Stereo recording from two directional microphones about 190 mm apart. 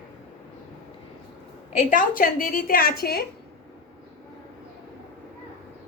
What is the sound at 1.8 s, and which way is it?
A woman's voice, 45° left (ahead or behind).